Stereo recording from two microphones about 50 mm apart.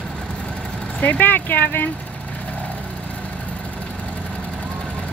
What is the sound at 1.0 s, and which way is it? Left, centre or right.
Speech, left.